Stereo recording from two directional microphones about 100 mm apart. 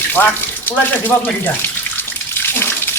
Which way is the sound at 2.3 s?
20° left (ahead or behind).